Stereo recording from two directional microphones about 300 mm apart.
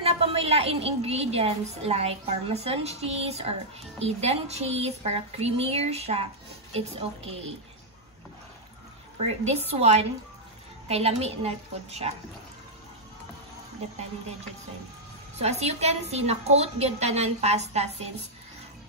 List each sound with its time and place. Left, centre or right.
0.0 s a woman's voice: centre
9.5 s a woman's voice: right
15.3 s a woman's voice: right